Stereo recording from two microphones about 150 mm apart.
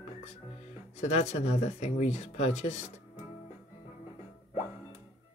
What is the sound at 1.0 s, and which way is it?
Speech, 45° left (ahead or behind).